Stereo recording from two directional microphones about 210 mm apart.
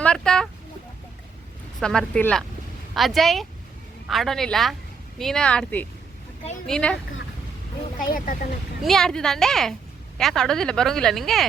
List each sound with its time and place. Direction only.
0.0 s a sound: 5° left (ahead or behind)
1.8 s a woman's voice: 5° left (ahead or behind)
7.9 s speech: 40° left (ahead or behind)
8.8 s a woman's voice: centre (ahead or behind)